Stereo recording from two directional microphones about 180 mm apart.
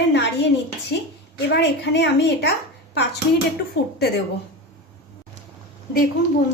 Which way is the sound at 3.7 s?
60° left (ahead or behind).